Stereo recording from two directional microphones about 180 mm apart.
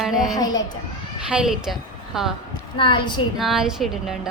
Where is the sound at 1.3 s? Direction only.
5° right (ahead or behind).